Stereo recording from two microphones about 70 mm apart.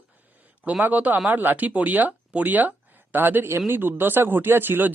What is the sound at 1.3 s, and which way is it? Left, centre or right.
Speech, right.